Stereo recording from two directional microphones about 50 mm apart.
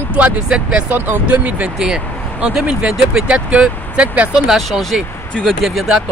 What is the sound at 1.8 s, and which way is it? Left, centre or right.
Speech, centre.